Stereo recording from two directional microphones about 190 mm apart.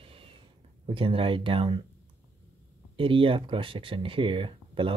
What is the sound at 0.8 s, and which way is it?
Speech, 30° right (ahead or behind).